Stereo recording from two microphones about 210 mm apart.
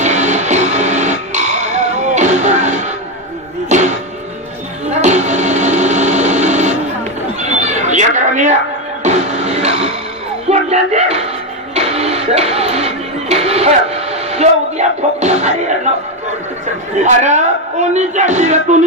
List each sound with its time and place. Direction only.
0.0 s music: 35° right (ahead or behind)
4.9 s music: 35° right (ahead or behind)
7.3 s cat: 35° right (ahead or behind)
9.0 s music: 35° right (ahead or behind)
10.5 s a sound: 30° right (ahead or behind)
11.7 s music: 30° right (ahead or behind)
17.0 s a man's voice: 35° right (ahead or behind)